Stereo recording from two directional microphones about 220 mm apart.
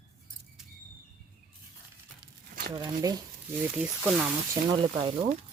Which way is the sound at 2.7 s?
15° right (ahead or behind).